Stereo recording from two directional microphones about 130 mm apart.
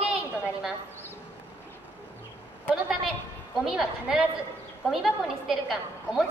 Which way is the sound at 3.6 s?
5° right (ahead or behind).